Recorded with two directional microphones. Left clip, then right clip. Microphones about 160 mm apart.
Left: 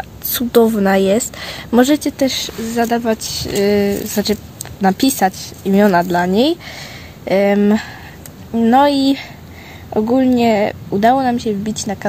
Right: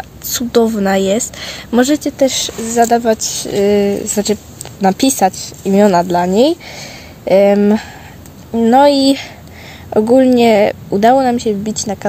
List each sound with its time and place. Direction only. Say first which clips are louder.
0.3 s speech: even; 10° right (ahead or behind)
2.2 s a woman's voice: right 4 dB; 25° right (ahead or behind)